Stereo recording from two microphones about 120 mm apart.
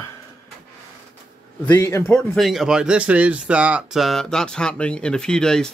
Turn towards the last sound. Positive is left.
turn(degrees=5)  # may be behind; listen again after turning